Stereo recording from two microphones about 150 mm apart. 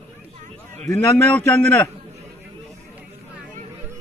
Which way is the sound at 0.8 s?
10° left (ahead or behind).